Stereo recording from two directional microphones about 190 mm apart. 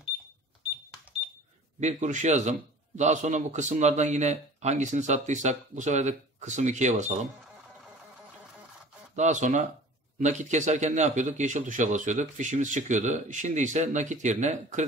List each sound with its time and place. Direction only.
1.8 s speech: 40° right (ahead or behind)
9.1 s speech: 40° right (ahead or behind)